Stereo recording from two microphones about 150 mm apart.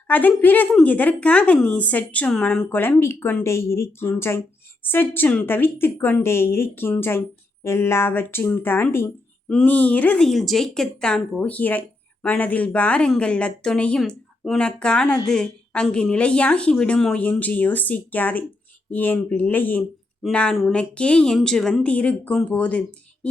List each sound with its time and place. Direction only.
0.1 s speech: 10° left (ahead or behind)